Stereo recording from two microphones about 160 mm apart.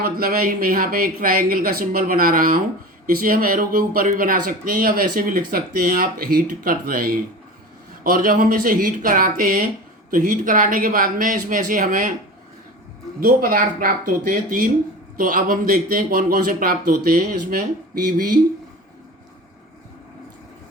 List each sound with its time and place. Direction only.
0.0 s speech: 70° right (ahead or behind)
13.1 s speech: 60° right (ahead or behind)